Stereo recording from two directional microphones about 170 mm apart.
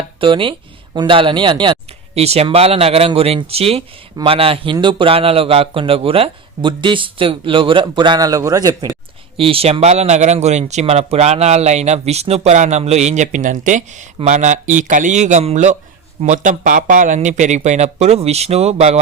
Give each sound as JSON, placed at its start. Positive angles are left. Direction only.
{"t": 0.2, "sound": "speech", "side_deg": -30}
{"t": 9.4, "sound": "speech", "side_deg": -35}